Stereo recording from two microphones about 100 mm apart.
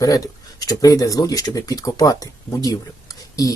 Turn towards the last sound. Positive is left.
turn(degrees=35)  # may be behind; listen again after turning